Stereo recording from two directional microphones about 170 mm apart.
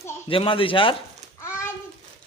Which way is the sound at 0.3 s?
30° left (ahead or behind).